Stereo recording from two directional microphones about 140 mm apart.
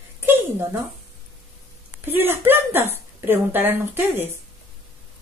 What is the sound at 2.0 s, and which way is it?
Speech, 15° right (ahead or behind).